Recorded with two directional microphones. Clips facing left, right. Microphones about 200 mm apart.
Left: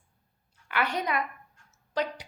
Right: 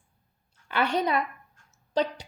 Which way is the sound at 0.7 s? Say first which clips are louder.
Right 4 dB; 30° right (ahead or behind).